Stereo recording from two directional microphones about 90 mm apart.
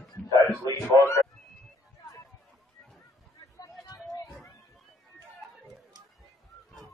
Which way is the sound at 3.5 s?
45° left (ahead or behind).